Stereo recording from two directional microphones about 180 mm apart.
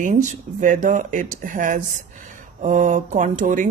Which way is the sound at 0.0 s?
45° right (ahead or behind).